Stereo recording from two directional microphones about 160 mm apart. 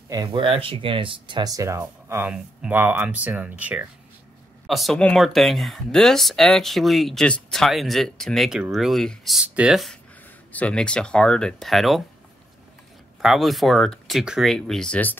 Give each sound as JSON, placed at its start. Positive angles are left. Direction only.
{"t": 0.3, "sound": "speech", "side_deg": -35}
{"t": 13.2, "sound": "speech", "side_deg": 0}